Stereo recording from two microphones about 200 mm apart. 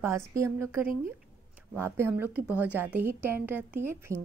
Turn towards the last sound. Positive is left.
turn(degrees=-10)  # may be behind; listen again after turning